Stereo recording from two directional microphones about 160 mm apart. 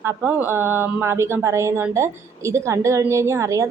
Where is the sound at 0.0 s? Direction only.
15° right (ahead or behind).